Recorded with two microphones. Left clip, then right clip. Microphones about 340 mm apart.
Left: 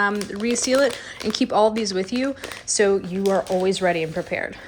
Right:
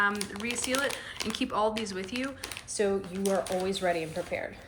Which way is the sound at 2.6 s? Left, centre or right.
Left.